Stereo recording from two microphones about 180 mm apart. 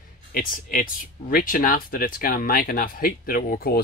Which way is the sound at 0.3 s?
50° left (ahead or behind).